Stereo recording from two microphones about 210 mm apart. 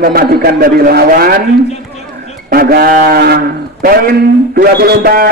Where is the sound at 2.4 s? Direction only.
45° right (ahead or behind).